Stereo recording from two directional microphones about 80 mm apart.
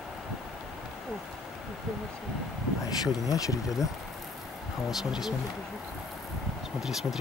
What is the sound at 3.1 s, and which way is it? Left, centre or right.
Speech, left.